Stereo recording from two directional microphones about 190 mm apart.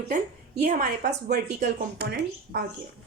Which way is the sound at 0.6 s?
55° right (ahead or behind).